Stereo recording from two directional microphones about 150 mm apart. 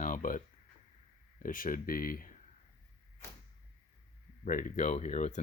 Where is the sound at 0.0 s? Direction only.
60° left (ahead or behind).